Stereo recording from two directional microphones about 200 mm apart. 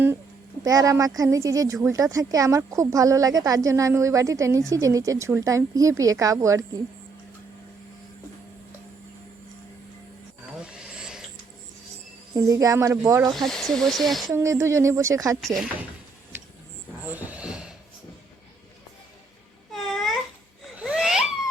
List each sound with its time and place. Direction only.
0.6 s speech: 15° right (ahead or behind)
10.6 s a sound: 5° right (ahead or behind)
12.3 s speech: 15° right (ahead or behind)
13.3 s speech: centre (ahead or behind)
14.3 s speech: 15° right (ahead or behind)
15.4 s speech: centre (ahead or behind)
17.1 s a sound: 10° right (ahead or behind)
19.7 s babbling: centre (ahead or behind)
20.7 s a sound: 5° right (ahead or behind)